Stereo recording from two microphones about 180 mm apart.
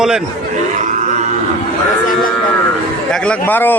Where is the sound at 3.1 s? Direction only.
5° left (ahead or behind).